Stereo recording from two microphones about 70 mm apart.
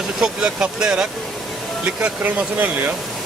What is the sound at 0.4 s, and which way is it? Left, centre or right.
Speech, centre.